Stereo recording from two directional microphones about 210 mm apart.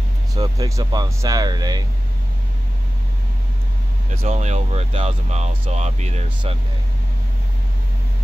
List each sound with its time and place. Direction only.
0.3 s speech: 15° right (ahead or behind)
4.1 s speech: 35° right (ahead or behind)